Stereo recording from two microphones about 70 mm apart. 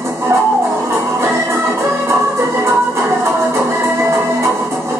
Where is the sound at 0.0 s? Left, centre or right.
Right.